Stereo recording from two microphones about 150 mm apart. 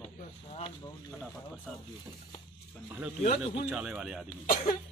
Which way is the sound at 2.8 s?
10° right (ahead or behind).